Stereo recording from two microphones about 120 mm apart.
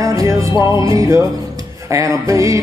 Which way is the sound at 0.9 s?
25° right (ahead or behind).